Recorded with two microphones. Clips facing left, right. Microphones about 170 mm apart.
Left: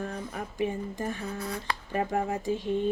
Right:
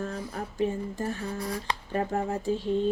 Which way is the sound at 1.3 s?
30° right (ahead or behind).